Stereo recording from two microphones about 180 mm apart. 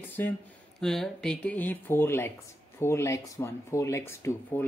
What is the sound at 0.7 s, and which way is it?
Speech, centre (ahead or behind).